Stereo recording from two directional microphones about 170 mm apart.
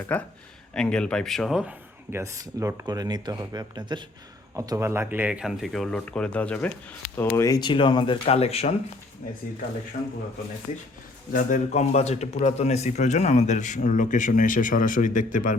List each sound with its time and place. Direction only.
0.1 s speech: 10° left (ahead or behind)
2.1 s speech: 20° right (ahead or behind); by 8.7 s 35° left (ahead or behind)
11.3 s a man's voice: 55° left (ahead or behind)